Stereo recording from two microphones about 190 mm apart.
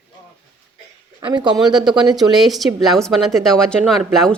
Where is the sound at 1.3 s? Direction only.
25° right (ahead or behind).